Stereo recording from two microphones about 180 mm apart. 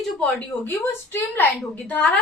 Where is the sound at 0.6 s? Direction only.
10° left (ahead or behind).